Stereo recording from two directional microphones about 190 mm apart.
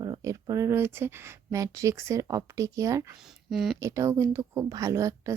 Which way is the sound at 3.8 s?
15° right (ahead or behind).